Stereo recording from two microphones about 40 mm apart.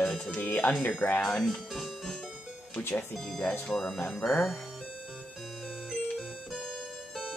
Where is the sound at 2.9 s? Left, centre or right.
Centre.